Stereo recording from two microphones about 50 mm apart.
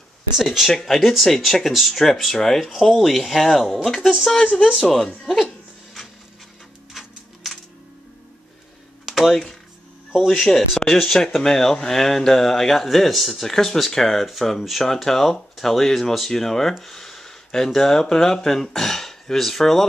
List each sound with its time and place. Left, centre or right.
0.4 s speech: centre
4.3 s speech: centre
5.0 s speech: centre
6.9 s a sound: centre
9.0 s computer keyboard: centre
10.1 s speech: centre
16.8 s a sound: centre
17.6 s speech: centre